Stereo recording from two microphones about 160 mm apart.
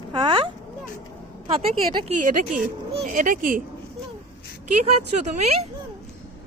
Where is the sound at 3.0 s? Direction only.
55° right (ahead or behind).